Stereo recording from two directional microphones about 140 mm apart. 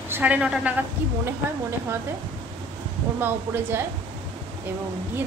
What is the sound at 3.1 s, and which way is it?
Speech, 15° right (ahead or behind).